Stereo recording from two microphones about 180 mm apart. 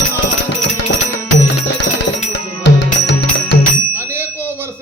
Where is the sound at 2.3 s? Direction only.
75° left (ahead or behind).